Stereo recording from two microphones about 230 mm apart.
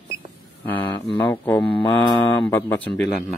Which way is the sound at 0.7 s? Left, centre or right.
Centre.